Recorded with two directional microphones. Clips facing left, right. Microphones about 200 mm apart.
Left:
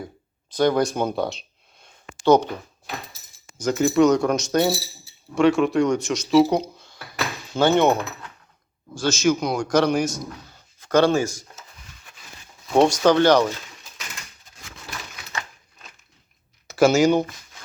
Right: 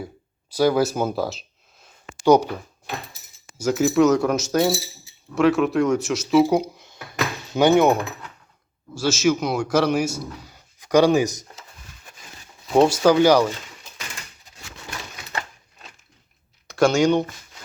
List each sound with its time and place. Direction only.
0.5 s speech: 5° right (ahead or behind)
3.6 s speech: 5° right (ahead or behind)
6.5 s a sound: 15° right (ahead or behind)
7.5 s speech: 15° right (ahead or behind)
12.7 s speech: 5° right (ahead or behind)
16.6 s speech: 5° left (ahead or behind)